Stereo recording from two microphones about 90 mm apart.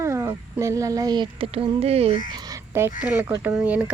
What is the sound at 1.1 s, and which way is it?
Speech, 75° right (ahead or behind).